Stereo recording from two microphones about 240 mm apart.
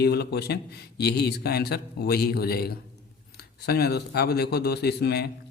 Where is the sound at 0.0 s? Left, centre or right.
Left.